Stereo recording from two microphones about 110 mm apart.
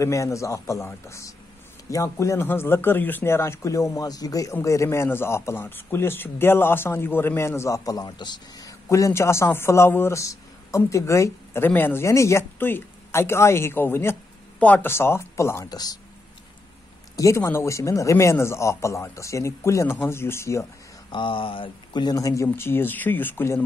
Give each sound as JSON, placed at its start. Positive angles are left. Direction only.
{"t": 0.0, "sound": "a man's voice", "side_deg": 30}
{"t": 15.7, "sound": "speech", "side_deg": 35}
{"t": 17.2, "sound": "a man's voice", "side_deg": 25}
{"t": 21.1, "sound": "a man's voice", "side_deg": 50}